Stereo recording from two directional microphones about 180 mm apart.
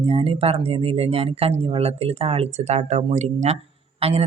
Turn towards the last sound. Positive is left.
turn(degrees=-35)  # may be behind; listen again after turning